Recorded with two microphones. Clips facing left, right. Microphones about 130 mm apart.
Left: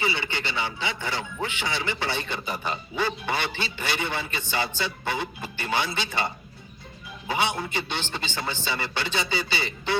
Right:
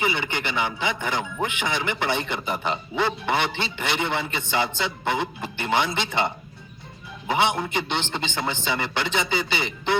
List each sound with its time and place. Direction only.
0.0 s a man's voice: 15° right (ahead or behind)